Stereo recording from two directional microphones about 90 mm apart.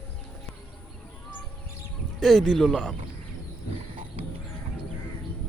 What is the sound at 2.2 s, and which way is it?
Speech, centre (ahead or behind).